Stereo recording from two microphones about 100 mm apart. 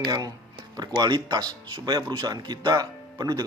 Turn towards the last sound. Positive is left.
turn(degrees=-40)  # may be behind; listen again after turning